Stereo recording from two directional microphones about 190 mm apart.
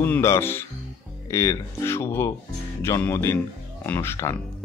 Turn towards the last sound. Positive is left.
turn(degrees=10)  # may be behind; listen again after turning